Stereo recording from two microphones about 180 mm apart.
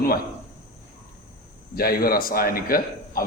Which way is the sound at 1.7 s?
55° left (ahead or behind).